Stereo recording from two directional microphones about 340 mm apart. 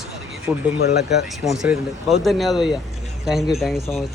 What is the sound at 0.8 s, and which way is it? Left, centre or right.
Speech, left.